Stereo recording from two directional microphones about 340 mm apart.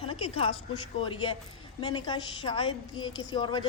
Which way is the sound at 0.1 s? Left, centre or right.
Centre.